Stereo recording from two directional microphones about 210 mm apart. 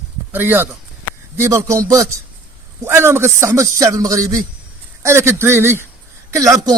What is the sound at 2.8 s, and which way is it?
A man's voice, 10° right (ahead or behind).